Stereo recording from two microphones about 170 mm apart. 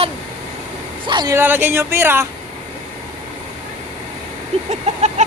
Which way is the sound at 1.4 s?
10° right (ahead or behind).